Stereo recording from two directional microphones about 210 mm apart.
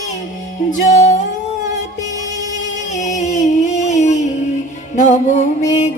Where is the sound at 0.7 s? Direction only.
35° left (ahead or behind).